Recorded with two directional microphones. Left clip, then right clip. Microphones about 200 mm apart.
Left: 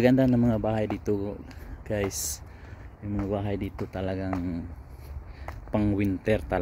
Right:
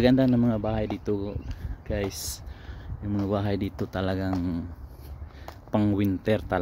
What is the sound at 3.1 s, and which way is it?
Speech, 25° right (ahead or behind).